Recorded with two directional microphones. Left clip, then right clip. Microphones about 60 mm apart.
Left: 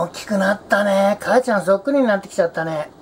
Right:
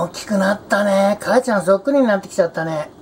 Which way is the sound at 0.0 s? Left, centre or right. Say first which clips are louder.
Right 1 dB; centre.